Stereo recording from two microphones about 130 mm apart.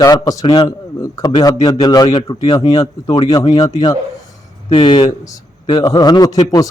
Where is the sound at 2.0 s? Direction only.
45° left (ahead or behind).